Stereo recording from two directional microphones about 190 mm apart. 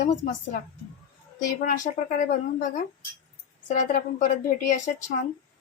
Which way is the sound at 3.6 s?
40° left (ahead or behind).